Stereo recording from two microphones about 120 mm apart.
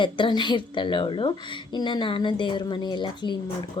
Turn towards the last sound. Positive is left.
turn(degrees=40)  # may be behind; listen again after turning